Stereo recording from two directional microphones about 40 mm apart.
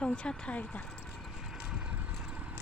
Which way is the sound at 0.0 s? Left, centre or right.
Left.